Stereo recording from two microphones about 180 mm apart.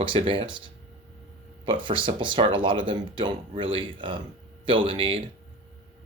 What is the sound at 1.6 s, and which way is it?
Speech, 30° right (ahead or behind).